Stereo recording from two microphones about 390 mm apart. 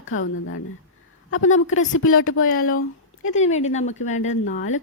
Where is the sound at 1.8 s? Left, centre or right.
Left.